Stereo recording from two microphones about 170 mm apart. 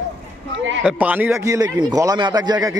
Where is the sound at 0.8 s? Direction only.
10° right (ahead or behind).